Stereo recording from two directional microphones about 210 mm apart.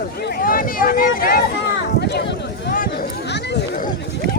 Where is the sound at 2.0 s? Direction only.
55° left (ahead or behind).